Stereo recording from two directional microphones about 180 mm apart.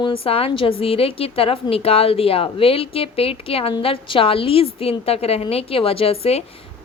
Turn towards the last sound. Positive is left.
turn(degrees=35)  # may be behind; listen again after turning